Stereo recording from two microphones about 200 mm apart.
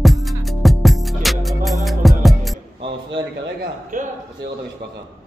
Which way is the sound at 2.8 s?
25° right (ahead or behind).